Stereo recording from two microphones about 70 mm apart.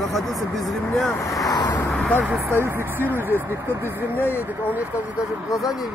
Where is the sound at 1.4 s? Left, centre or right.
Left.